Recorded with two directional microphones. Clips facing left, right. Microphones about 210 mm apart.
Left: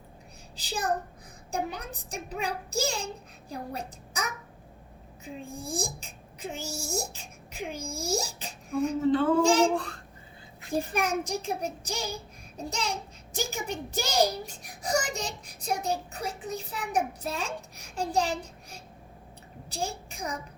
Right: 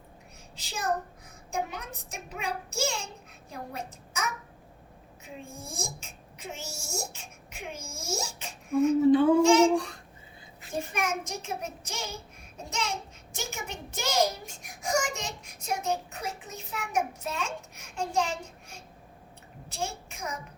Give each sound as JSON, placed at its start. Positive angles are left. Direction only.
{"t": 0.5, "sound": "a child's voice", "side_deg": 35}
{"t": 9.0, "sound": "child singing", "side_deg": -15}
{"t": 9.4, "sound": "a child's voice", "side_deg": 35}
{"t": 10.8, "sound": "a child's voice", "side_deg": 35}